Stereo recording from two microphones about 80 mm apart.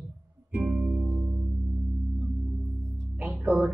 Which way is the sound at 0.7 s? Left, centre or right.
Centre.